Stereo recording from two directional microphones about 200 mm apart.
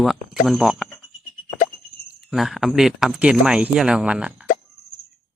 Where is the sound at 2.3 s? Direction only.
Centre (ahead or behind).